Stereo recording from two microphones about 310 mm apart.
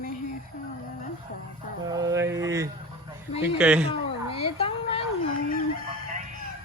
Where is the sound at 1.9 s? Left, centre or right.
Centre.